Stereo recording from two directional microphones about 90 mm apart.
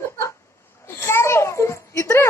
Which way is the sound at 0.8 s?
25° left (ahead or behind).